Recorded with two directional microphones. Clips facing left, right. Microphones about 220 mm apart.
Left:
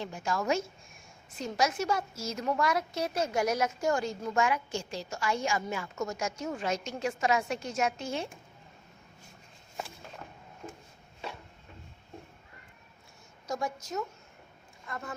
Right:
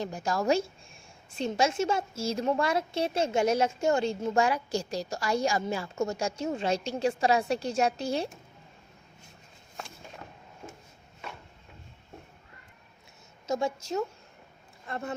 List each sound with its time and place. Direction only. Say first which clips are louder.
0.0 s a woman's voice: right 3 dB; 40° right (ahead or behind)
13.5 s a woman's voice: right 5 dB; 25° right (ahead or behind)